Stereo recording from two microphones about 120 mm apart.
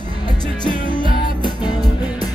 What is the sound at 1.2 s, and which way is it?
Music, 35° left (ahead or behind).